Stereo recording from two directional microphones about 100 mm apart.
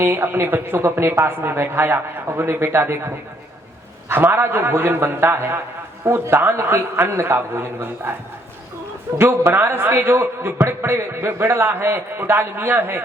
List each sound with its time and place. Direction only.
0.0 s a woman's voice: 25° right (ahead or behind)
4.1 s a woman's voice: 20° right (ahead or behind)
9.1 s a woman's voice: 25° right (ahead or behind)